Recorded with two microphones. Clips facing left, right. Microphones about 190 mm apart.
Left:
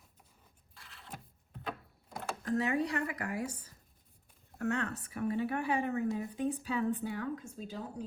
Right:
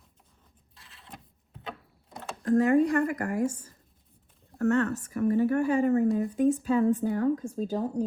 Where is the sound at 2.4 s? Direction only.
50° right (ahead or behind).